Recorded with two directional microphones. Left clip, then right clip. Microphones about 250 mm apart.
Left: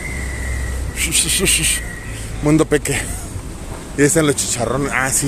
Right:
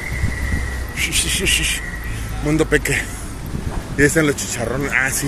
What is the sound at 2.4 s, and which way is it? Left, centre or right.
Speech, left.